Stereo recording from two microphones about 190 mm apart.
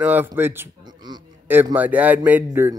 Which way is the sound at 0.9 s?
20° right (ahead or behind).